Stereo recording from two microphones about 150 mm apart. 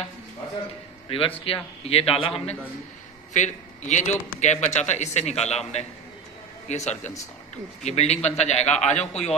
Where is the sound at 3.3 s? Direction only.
50° left (ahead or behind).